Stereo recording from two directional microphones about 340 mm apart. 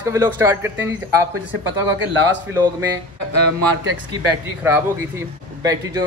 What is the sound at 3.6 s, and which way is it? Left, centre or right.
Speech, left.